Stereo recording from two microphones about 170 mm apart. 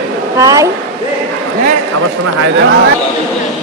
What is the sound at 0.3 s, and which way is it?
Speech, 20° right (ahead or behind).